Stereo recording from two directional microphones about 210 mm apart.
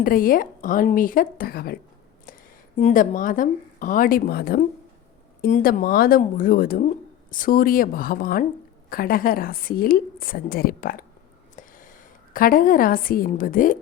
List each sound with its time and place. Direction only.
0.0 s a woman's voice: 40° left (ahead or behind)